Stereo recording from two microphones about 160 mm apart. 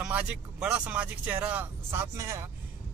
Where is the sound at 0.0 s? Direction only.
5° right (ahead or behind).